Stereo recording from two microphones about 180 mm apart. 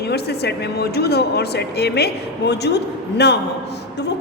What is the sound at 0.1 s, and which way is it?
A woman's voice, 65° left (ahead or behind).